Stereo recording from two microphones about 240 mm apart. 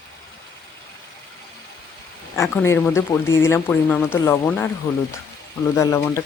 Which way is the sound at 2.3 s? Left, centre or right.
Centre.